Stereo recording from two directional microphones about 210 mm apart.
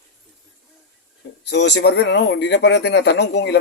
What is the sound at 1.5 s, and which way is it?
Speech, 55° left (ahead or behind).